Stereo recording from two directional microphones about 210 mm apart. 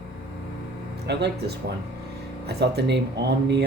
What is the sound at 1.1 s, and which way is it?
Speech, 55° right (ahead or behind).